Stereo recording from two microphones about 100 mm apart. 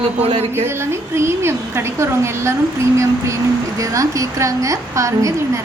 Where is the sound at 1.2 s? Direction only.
25° right (ahead or behind).